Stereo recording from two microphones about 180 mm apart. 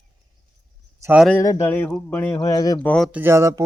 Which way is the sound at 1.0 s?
5° right (ahead or behind).